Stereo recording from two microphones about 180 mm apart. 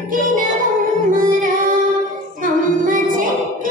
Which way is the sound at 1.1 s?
50° right (ahead or behind).